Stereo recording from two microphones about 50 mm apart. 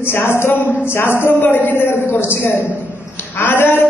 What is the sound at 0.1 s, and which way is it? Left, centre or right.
A man's voice, left.